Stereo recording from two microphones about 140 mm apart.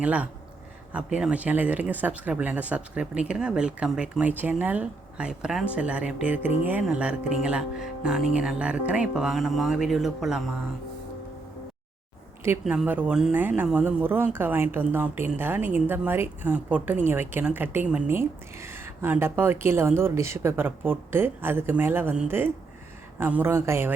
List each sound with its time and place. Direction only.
0.0 s speech: 10° right (ahead or behind)
12.6 s speech: 10° right (ahead or behind)